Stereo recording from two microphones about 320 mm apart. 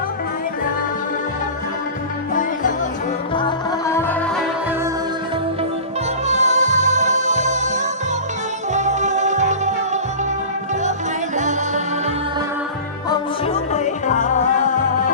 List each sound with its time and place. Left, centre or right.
2.3 s music: left
3.3 s music: centre
6.2 s music: right
11.3 s music: right
13.1 s music: centre